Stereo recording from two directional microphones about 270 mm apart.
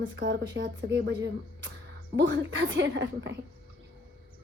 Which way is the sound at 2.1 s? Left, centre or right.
Right.